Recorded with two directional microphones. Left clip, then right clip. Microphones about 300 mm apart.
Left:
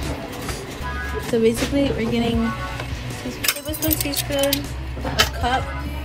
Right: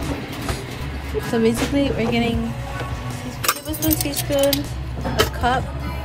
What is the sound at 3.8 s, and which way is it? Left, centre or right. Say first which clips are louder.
Speech: right 2 dB; centre.